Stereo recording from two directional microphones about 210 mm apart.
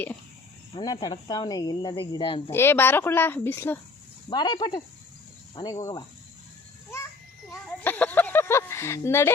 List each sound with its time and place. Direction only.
0.7 s speech: 20° left (ahead or behind)
2.5 s speech: 10° left (ahead or behind)
4.3 s speech: 20° left (ahead or behind)
7.5 s speech: 10° left (ahead or behind)